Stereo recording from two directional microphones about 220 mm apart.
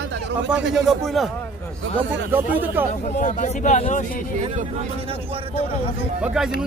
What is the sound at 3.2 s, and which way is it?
Speech, 35° left (ahead or behind).